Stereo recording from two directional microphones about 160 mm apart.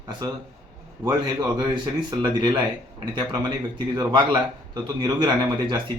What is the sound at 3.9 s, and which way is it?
Speech, 25° right (ahead or behind).